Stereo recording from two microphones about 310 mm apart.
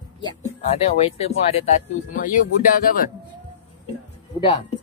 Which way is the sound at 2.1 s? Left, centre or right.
Left.